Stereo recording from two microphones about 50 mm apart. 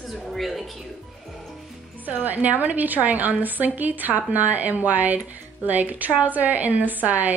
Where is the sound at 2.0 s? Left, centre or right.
Right.